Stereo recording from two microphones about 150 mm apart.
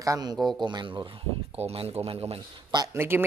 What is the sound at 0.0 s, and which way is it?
Speech, 25° right (ahead or behind).